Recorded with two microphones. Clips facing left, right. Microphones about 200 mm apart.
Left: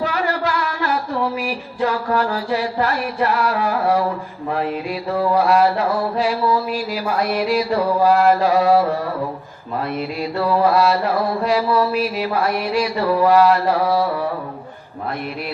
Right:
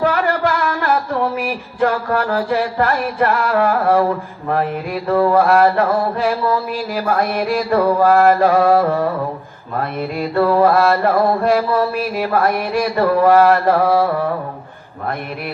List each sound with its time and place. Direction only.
0.0 s music: 55° right (ahead or behind)
4.5 s mantra: 55° right (ahead or behind)